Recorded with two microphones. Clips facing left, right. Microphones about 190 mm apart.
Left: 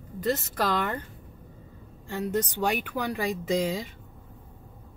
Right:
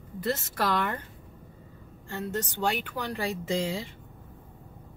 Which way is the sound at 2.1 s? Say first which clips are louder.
Left 4 dB; 15° left (ahead or behind).